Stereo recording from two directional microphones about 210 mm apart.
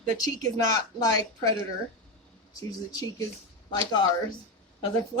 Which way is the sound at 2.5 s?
15° left (ahead or behind).